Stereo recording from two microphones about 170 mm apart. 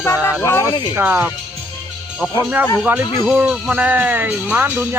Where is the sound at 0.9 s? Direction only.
10° right (ahead or behind).